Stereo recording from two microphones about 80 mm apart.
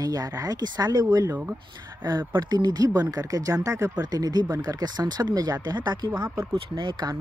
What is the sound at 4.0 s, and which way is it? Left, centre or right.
Speech, right.